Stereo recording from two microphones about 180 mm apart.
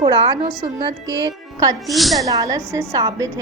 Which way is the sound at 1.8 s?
Centre (ahead or behind).